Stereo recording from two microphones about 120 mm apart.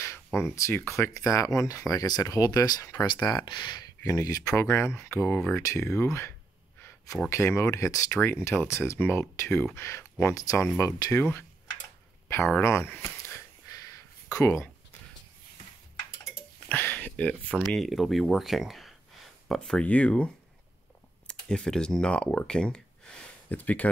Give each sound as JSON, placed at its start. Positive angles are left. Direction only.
{"t": 0.4, "sound": "speech", "side_deg": 20}
{"t": 12.6, "sound": "speech", "side_deg": 20}
{"t": 13.0, "sound": "a sound", "side_deg": 25}
{"t": 16.6, "sound": "a sound", "side_deg": 15}
{"t": 17.6, "sound": "speech", "side_deg": 0}
{"t": 21.3, "sound": "speech", "side_deg": 5}